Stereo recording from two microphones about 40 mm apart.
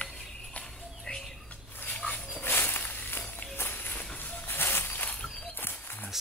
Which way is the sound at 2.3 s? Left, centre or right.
Left.